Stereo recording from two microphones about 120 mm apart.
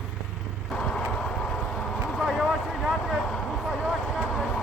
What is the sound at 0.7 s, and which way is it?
Vehicle, 5° left (ahead or behind).